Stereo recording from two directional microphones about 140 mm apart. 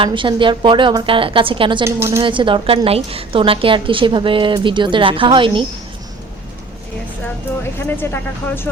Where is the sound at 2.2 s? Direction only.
35° right (ahead or behind).